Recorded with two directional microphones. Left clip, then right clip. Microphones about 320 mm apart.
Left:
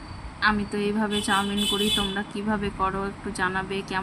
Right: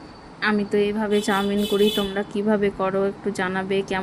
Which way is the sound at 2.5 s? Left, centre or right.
Centre.